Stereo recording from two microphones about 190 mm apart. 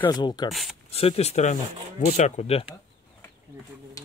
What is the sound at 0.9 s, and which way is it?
Speech, 30° left (ahead or behind).